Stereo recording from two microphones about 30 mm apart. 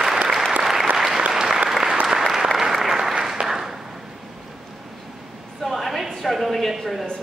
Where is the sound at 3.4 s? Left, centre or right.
Right.